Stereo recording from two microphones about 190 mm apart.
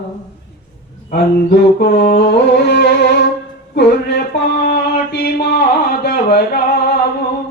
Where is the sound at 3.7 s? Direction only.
60° left (ahead or behind).